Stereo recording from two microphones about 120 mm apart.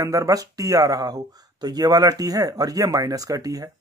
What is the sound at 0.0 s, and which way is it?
Speech, 30° right (ahead or behind).